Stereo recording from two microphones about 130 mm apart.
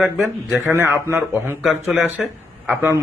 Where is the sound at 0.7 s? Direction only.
15° right (ahead or behind).